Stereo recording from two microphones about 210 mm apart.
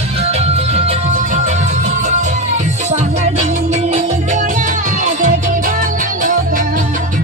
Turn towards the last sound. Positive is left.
turn(degrees=-35)  # may be behind; listen again after turning